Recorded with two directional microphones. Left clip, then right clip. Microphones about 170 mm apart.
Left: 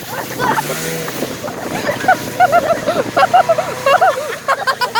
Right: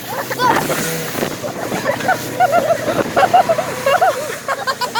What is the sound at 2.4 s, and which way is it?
Speech, 30° left (ahead or behind).